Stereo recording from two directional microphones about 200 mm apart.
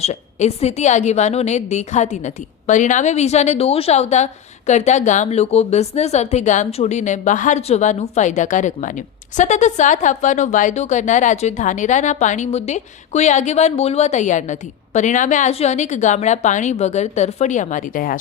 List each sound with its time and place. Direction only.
0.0 s a woman's voice: 35° left (ahead or behind)